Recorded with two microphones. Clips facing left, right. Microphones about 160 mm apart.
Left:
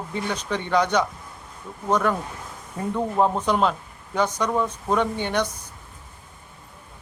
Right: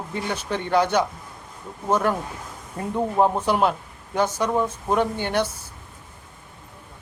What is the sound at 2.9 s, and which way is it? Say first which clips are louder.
A man's voice: right 1 dB; 15° right (ahead or behind).